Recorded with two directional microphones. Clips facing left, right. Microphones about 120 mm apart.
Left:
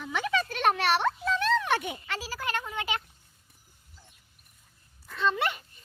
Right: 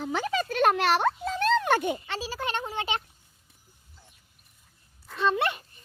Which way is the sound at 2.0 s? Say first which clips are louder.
Right 2 dB; 25° right (ahead or behind).